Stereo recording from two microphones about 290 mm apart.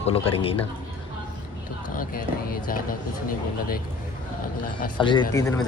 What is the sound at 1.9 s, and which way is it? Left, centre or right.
Speech, left.